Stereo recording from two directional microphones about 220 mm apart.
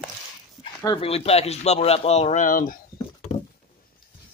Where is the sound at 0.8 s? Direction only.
25° left (ahead or behind).